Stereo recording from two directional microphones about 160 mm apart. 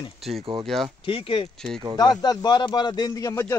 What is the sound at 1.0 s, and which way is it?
A man's voice, 35° left (ahead or behind).